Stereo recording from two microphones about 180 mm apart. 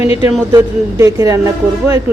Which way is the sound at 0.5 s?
15° right (ahead or behind).